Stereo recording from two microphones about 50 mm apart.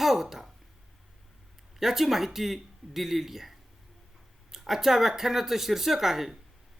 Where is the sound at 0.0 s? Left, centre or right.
Centre.